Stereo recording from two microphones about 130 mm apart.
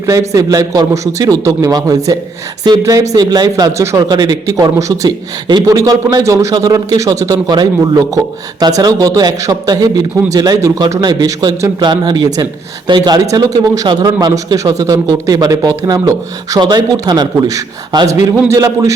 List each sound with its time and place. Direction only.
0.0 s a man's voice: 25° right (ahead or behind)